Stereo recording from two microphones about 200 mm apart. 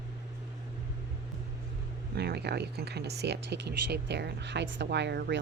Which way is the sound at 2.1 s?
55° right (ahead or behind).